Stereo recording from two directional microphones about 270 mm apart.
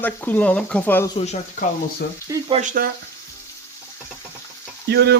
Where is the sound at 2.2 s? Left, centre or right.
Right.